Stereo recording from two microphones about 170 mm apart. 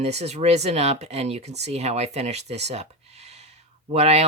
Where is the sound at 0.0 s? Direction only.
40° right (ahead or behind).